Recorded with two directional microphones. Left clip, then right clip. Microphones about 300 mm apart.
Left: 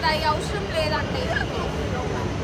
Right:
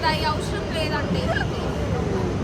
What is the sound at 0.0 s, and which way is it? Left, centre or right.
Vehicle, centre.